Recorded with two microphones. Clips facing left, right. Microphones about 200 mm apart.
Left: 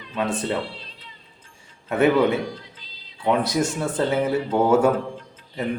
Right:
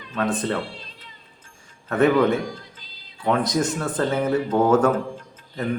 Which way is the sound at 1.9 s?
10° left (ahead or behind).